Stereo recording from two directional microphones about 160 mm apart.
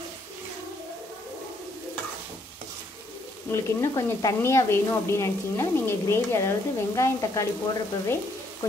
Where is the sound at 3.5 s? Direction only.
15° left (ahead or behind).